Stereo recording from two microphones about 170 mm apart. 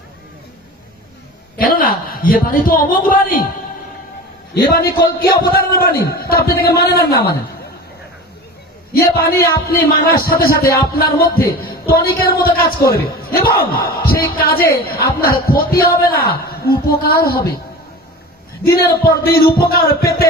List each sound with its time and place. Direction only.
1.5 s a man's voice: 55° left (ahead or behind)
4.7 s a man's voice: 65° left (ahead or behind)
8.9 s a man's voice: 65° left (ahead or behind)
18.6 s a man's voice: 65° left (ahead or behind)